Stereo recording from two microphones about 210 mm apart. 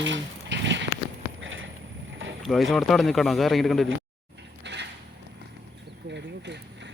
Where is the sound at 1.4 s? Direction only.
65° right (ahead or behind).